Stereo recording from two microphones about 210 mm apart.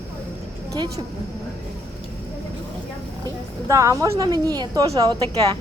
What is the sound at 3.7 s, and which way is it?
A woman's voice, 15° right (ahead or behind).